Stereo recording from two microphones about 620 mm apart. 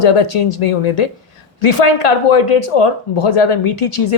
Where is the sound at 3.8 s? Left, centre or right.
Left.